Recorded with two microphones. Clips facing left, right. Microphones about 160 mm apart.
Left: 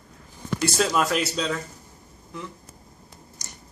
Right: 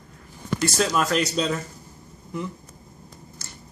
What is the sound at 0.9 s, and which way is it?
Speech, 5° left (ahead or behind).